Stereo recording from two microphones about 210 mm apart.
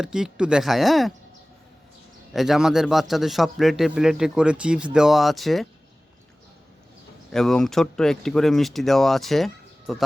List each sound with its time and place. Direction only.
0.0 s a man's voice: 5° right (ahead or behind)
2.3 s a man's voice: centre (ahead or behind)
7.3 s a man's voice: centre (ahead or behind)